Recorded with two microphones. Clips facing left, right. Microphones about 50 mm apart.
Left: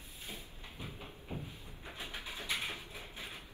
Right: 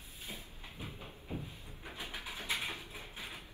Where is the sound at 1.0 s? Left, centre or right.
Centre.